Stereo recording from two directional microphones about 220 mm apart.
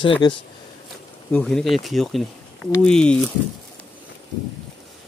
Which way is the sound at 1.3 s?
5° left (ahead or behind).